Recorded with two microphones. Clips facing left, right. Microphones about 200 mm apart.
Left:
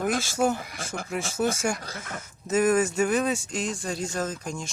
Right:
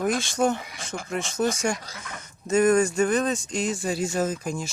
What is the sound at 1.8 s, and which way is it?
Speech, 50° left (ahead or behind).